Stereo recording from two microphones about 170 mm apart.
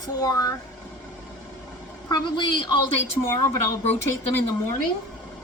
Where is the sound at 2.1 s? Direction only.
30° left (ahead or behind).